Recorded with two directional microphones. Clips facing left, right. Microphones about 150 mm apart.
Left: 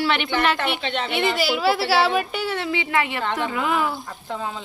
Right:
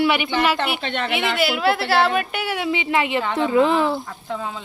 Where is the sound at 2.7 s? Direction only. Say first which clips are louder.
Right 5 dB; 20° right (ahead or behind).